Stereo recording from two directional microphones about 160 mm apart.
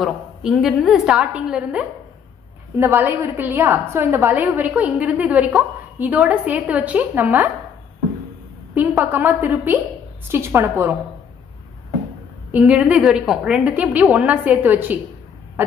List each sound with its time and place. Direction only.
0.0 s a woman's voice: centre (ahead or behind)
8.7 s a woman's voice: 10° right (ahead or behind)
12.4 s a woman's voice: 10° right (ahead or behind)